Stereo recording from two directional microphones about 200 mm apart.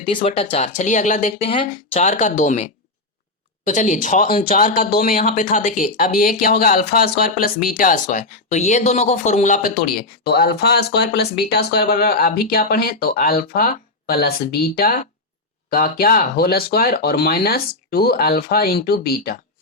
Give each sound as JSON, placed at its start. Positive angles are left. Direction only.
{"t": 0.2, "sound": "speech", "side_deg": 30}
{"t": 10.2, "sound": "speech", "side_deg": 50}